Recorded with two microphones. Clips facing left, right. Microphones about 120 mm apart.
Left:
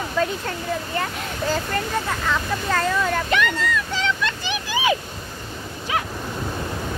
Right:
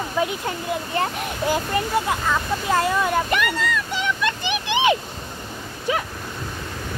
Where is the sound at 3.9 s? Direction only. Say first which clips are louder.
Right 1 dB; 15° right (ahead or behind).